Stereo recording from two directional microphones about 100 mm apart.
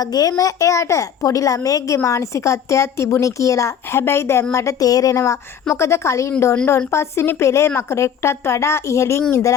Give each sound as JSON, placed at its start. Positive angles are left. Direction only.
{"t": 0.0, "sound": "a woman's voice", "side_deg": 40}